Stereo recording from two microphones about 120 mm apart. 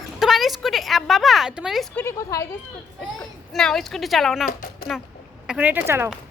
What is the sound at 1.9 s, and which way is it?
Speech, 20° left (ahead or behind).